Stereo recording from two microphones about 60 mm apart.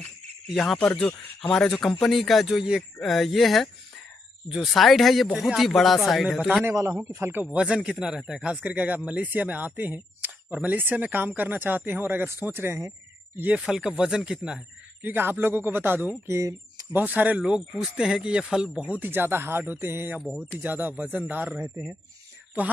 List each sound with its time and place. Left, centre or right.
1.4 s a man's voice: centre
3.0 s a man's voice: centre
6.6 s a man's voice: right
7.2 s speech: right
7.5 s speech: centre
8.6 s speech: right
13.6 s speech: centre
15.0 s speech: right
16.3 s speech: right
16.9 s speech: right
17.4 s speech: centre
19.0 s speech: right